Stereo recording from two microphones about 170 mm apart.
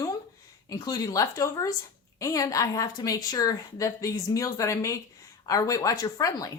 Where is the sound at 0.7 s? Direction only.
20° left (ahead or behind).